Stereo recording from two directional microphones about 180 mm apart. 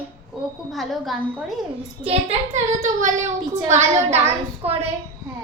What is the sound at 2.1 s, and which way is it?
A child's voice, 35° right (ahead or behind).